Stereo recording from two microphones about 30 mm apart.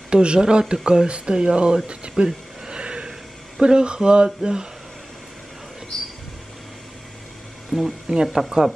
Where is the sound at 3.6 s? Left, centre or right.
Right.